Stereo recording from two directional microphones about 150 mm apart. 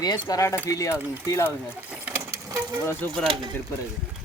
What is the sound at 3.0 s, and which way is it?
Speech, 15° left (ahead or behind).